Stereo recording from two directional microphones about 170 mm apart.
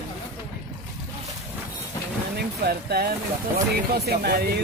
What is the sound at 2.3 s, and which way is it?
Speech, 65° right (ahead or behind).